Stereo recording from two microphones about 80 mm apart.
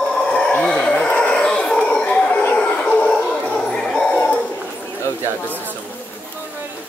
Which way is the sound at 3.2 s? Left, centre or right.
Centre.